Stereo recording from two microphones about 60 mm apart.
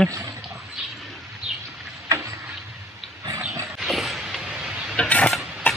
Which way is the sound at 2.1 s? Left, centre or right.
Right.